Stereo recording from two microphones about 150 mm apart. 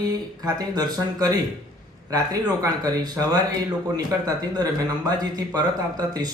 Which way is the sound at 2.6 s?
25° right (ahead or behind).